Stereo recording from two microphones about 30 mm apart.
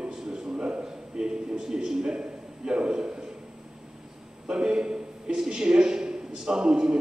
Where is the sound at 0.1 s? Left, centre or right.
Centre.